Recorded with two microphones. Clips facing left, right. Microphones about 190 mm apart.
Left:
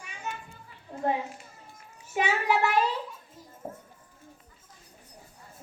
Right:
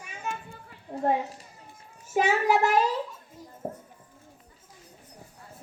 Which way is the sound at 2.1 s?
45° right (ahead or behind).